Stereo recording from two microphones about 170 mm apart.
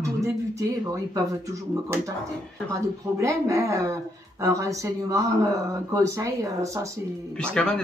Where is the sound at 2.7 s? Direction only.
20° right (ahead or behind).